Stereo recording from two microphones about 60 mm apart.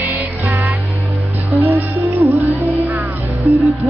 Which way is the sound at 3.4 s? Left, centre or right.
Centre.